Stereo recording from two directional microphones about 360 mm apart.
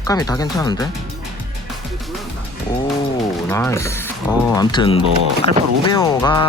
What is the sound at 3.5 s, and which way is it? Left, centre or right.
Speech, centre.